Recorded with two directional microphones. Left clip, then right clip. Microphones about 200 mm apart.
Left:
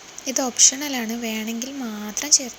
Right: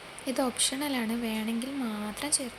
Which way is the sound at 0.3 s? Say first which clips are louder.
Left 10 dB; 20° left (ahead or behind).